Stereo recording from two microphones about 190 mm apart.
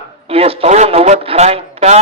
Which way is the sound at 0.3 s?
30° right (ahead or behind).